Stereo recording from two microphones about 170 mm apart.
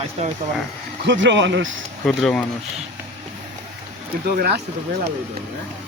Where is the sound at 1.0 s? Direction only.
90° right.